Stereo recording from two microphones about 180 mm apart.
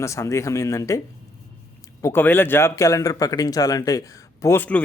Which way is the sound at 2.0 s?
10° left (ahead or behind).